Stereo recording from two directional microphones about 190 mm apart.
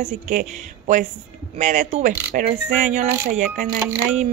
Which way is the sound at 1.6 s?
40° right (ahead or behind).